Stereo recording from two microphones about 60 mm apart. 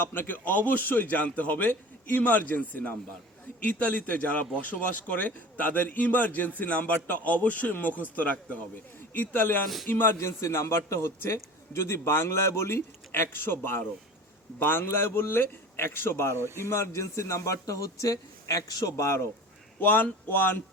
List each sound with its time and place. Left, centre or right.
0.0 s a man's voice: left
10.2 s a man's voice: left
18.9 s speech: left
19.8 s speech: left